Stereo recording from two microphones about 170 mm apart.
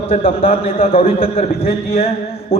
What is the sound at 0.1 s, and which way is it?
A man's voice, 35° left (ahead or behind).